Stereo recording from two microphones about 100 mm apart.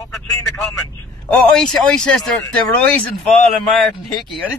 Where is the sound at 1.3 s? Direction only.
5° left (ahead or behind).